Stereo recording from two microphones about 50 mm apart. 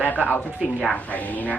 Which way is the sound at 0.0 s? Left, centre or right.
Left.